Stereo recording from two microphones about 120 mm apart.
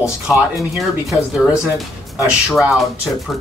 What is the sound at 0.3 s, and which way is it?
Speech, 5° right (ahead or behind).